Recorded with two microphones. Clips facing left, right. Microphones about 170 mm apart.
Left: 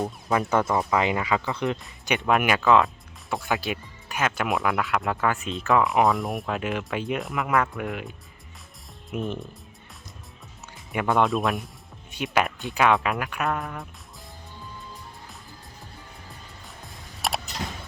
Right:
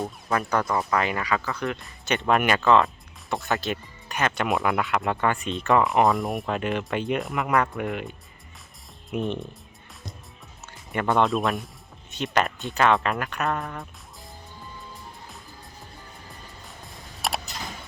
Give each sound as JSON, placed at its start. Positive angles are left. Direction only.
{"t": 0.6, "sound": "speech", "side_deg": 0}
{"t": 0.9, "sound": "speech", "side_deg": 20}
{"t": 2.0, "sound": "speech", "side_deg": 10}
{"t": 10.9, "sound": "speech", "side_deg": 5}
{"t": 17.2, "sound": "a sound", "side_deg": 0}